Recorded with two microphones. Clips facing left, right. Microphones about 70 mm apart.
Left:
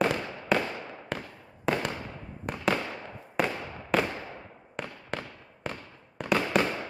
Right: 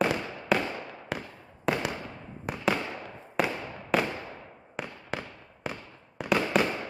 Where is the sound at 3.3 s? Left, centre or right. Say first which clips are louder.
Even; centre.